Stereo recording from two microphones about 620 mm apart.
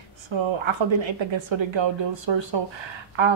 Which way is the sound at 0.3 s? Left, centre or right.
Right.